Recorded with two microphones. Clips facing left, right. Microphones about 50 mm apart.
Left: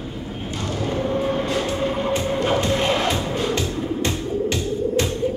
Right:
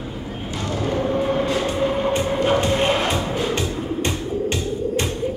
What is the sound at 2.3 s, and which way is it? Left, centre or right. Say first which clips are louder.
Music: right 1 dB; centre.